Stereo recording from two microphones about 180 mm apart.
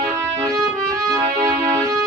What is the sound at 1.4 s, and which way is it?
Music, 15° right (ahead or behind).